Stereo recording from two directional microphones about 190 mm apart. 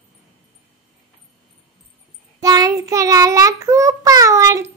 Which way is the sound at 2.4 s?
20° right (ahead or behind).